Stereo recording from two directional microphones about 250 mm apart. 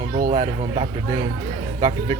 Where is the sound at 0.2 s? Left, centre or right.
Right.